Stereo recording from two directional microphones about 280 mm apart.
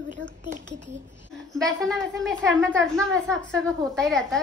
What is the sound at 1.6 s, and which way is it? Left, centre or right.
A woman's voice, centre.